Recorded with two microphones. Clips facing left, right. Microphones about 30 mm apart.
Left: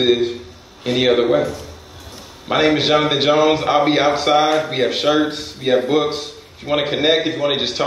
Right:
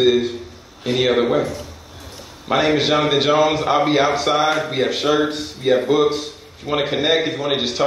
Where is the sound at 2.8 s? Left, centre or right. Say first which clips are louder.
Left 1 dB; centre.